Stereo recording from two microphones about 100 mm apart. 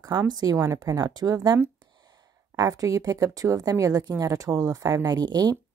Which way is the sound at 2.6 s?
35° right (ahead or behind).